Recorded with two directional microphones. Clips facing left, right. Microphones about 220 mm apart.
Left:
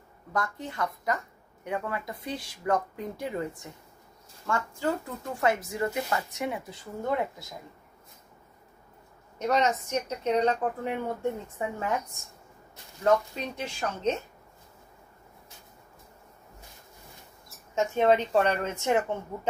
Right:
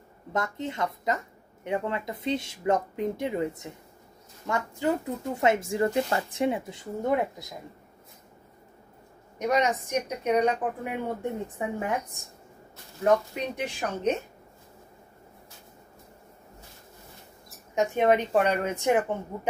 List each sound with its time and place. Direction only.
0.3 s speech: 25° right (ahead or behind)
9.4 s a woman's voice: 15° right (ahead or behind)
17.7 s a woman's voice: 15° right (ahead or behind)